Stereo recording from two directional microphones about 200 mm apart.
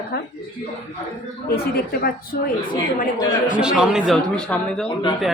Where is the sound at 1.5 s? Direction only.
50° left (ahead or behind).